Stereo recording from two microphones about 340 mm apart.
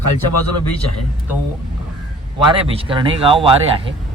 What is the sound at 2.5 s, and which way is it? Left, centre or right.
Speech, centre.